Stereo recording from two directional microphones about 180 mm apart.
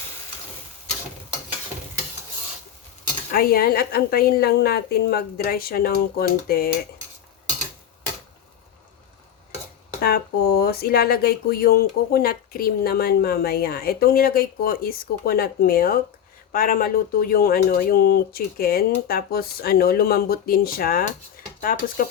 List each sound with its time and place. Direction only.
3.3 s speech: 55° left (ahead or behind)
10.0 s speech: 60° left (ahead or behind)